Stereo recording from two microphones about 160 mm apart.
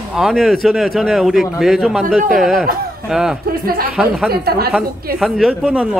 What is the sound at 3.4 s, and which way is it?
Speech, 65° right (ahead or behind).